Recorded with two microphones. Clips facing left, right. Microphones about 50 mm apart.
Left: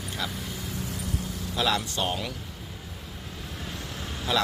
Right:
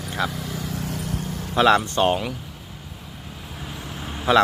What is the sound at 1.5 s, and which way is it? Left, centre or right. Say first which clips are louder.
Speech: right 10 dB; right.